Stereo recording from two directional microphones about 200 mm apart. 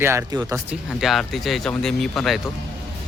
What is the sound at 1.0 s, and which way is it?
Speech, centre (ahead or behind).